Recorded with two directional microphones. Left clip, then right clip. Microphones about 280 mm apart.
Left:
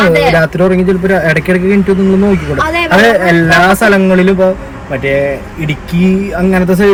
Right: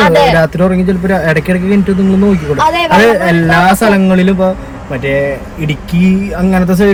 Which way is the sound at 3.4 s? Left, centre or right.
Centre.